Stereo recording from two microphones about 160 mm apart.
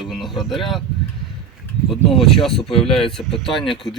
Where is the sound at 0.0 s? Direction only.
Centre (ahead or behind).